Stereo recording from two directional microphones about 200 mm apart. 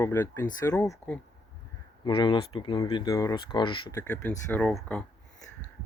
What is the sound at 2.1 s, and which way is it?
Speech, 25° left (ahead or behind).